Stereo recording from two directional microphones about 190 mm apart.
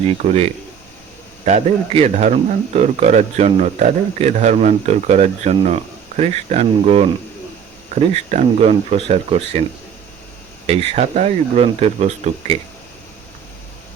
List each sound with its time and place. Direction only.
0.2 s speech: 35° right (ahead or behind)
10.7 s speech: 35° right (ahead or behind)